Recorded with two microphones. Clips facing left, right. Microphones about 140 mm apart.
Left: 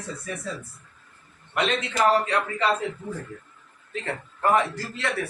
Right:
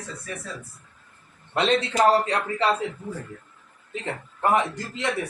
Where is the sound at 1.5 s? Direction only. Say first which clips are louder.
Right 3 dB; 30° right (ahead or behind).